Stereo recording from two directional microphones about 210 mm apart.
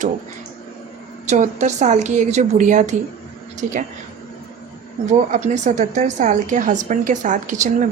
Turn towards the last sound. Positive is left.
turn(degrees=-35)  # may be behind; listen again after turning